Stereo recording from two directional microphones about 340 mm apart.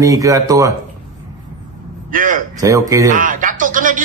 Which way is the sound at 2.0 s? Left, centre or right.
Right.